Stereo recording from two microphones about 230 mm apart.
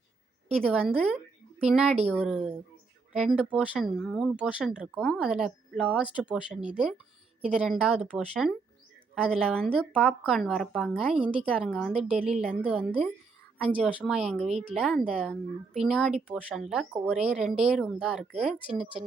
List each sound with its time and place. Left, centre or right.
0.5 s a woman's voice: centre
11.1 s speech: right
11.5 s speech: centre